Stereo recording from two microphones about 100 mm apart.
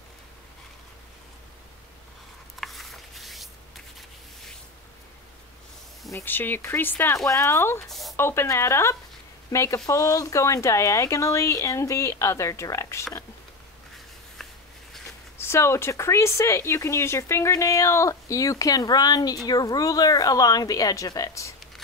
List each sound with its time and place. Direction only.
2.6 s shuffling cards: centre (ahead or behind)
6.1 s speech: 20° left (ahead or behind)
7.8 s speech: centre (ahead or behind)
8.2 s speech: 25° left (ahead or behind)
14.4 s a sound: 5° left (ahead or behind)
15.3 s speech: 25° left (ahead or behind)